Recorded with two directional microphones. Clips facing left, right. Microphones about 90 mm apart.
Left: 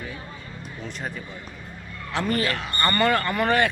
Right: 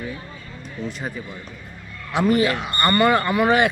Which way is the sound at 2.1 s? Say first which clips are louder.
Right 6 dB; 15° right (ahead or behind).